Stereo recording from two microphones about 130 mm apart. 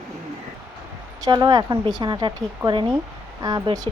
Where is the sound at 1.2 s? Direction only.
35° right (ahead or behind).